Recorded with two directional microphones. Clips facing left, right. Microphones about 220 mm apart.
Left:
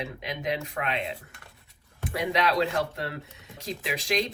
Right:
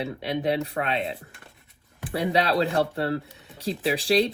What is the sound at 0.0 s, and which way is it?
Speech, 35° right (ahead or behind).